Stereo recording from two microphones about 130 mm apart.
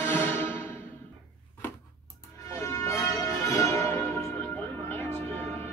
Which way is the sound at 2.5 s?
25° left (ahead or behind).